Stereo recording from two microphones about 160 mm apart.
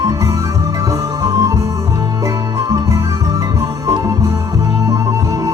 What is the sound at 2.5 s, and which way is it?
Music, 20° right (ahead or behind).